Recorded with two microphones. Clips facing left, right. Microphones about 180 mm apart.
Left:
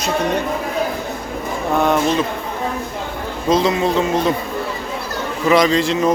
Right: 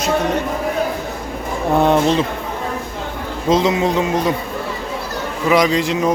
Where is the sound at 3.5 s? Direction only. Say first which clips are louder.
Even; 20° right (ahead or behind).